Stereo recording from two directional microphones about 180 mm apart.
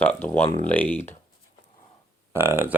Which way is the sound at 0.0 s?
10° left (ahead or behind).